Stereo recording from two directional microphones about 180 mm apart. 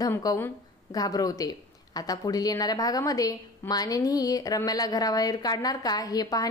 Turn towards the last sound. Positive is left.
turn(degrees=20)  # may be behind; listen again after turning